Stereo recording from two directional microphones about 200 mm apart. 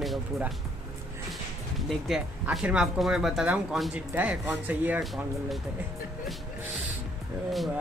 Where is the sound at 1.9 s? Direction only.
Centre (ahead or behind).